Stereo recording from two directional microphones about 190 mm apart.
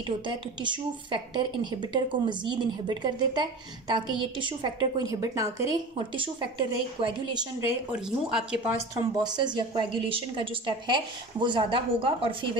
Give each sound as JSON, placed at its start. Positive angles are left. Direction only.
{"t": 0.0, "sound": "a woman's voice", "side_deg": -25}
{"t": 7.9, "sound": "speech", "side_deg": -5}
{"t": 8.9, "sound": "a woman's voice", "side_deg": -20}